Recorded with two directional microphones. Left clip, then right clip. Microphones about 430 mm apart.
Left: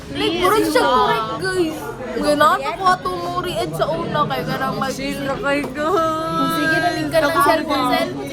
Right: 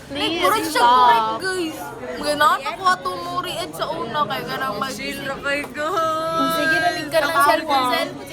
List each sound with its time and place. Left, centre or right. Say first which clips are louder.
0.5 s a woman's voice: left 2 dB; centre
0.9 s female singing: right 3 dB; centre
1.5 s children playing: left 4 dB; centre
2.2 s a woman's voice: left 3 dB; centre